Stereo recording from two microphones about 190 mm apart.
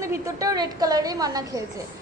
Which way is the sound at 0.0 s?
15° right (ahead or behind).